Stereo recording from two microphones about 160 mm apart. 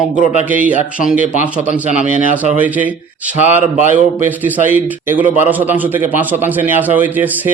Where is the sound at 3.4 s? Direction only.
45° left (ahead or behind).